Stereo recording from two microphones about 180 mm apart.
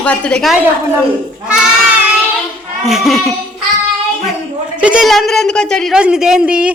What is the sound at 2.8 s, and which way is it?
Speech, centre (ahead or behind).